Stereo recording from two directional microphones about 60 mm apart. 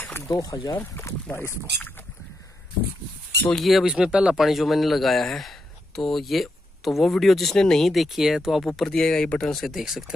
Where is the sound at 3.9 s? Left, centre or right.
Centre.